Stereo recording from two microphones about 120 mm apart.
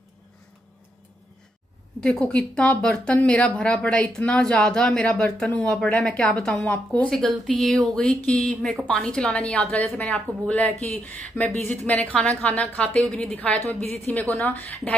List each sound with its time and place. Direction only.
2.0 s speech: 5° left (ahead or behind)